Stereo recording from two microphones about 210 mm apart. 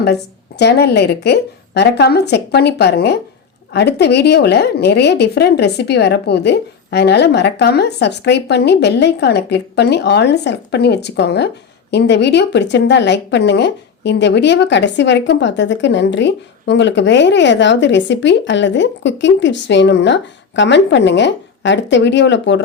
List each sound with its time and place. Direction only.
0.6 s a woman's voice: 50° left (ahead or behind)